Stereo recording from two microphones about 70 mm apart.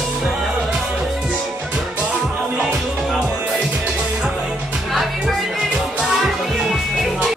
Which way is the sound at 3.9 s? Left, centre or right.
Centre.